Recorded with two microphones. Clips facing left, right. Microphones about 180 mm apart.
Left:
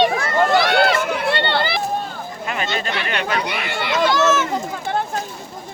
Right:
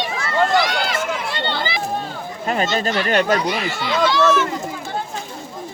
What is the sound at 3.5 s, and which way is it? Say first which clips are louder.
Speech: right 2 dB; 60° left (ahead or behind).